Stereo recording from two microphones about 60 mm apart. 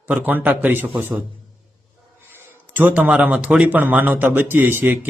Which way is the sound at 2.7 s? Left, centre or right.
Right.